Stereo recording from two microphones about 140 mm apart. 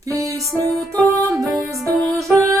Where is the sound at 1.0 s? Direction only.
25° right (ahead or behind).